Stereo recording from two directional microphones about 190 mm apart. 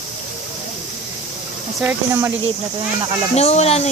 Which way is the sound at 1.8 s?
10° right (ahead or behind).